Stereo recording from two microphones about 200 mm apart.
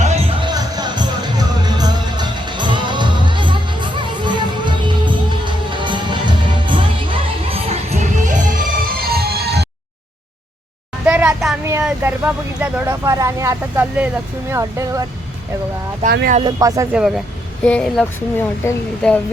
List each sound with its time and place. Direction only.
0.0 s music: 30° right (ahead or behind)
9.0 s music: 50° right (ahead or behind)
11.0 s a sound: 5° right (ahead or behind)
11.6 s vehicle: 10° right (ahead or behind)
12.5 s speech: 5° right (ahead or behind)
16.0 s speech: 45° right (ahead or behind)
16.4 s speech: 20° right (ahead or behind)
16.9 s speech: 5° right (ahead or behind)